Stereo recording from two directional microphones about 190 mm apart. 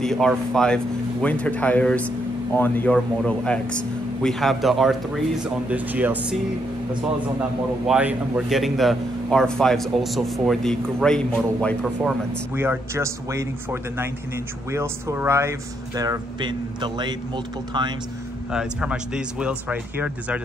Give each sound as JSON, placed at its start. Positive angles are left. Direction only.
{"t": 0.0, "sound": "a man's voice", "side_deg": 0}
{"t": 7.8, "sound": "a man's voice", "side_deg": -5}
{"t": 18.5, "sound": "a man's voice", "side_deg": -5}